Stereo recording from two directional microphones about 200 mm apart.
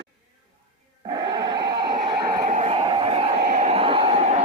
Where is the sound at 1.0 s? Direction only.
25° right (ahead or behind).